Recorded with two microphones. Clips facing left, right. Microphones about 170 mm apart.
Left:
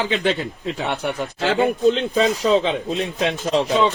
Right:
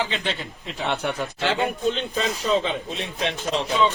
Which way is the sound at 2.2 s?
35° left (ahead or behind).